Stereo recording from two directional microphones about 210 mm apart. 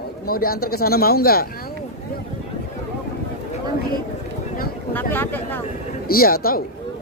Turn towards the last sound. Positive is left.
turn(degrees=45)  # may be behind; listen again after turning